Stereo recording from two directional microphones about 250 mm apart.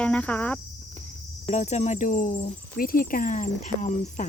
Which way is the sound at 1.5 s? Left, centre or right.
Left.